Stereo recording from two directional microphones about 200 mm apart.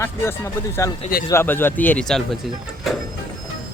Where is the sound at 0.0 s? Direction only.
15° left (ahead or behind).